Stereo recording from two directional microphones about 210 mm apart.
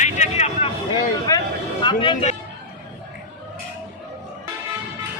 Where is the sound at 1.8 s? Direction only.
25° left (ahead or behind).